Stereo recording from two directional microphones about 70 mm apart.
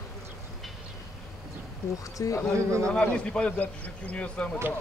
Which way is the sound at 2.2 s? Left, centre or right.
Left.